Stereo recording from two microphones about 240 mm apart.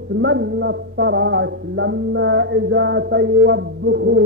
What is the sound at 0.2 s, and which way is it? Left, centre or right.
Mantra, right.